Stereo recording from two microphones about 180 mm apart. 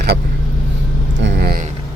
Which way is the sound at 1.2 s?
80° right.